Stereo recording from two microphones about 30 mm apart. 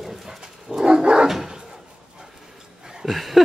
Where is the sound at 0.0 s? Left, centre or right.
Centre.